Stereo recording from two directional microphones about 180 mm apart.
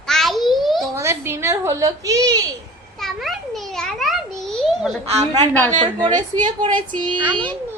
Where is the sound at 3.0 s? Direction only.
Centre (ahead or behind).